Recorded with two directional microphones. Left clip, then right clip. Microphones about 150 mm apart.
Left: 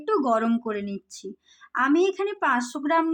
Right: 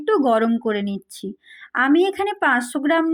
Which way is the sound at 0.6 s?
25° right (ahead or behind).